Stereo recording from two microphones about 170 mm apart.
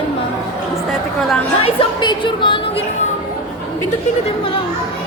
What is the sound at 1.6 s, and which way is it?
Speech, 30° left (ahead or behind).